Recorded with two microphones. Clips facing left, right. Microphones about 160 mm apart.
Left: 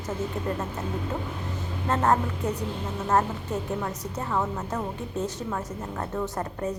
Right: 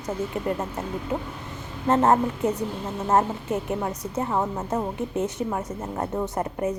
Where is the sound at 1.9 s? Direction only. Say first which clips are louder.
Right 4 dB; 20° right (ahead or behind).